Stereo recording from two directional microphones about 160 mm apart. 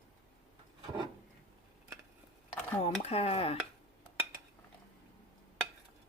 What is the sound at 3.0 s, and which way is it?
Speech, 40° left (ahead or behind).